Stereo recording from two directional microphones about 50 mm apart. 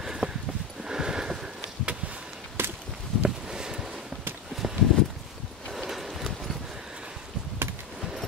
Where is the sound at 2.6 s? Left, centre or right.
Right.